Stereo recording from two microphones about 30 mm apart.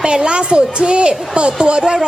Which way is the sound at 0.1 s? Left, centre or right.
Right.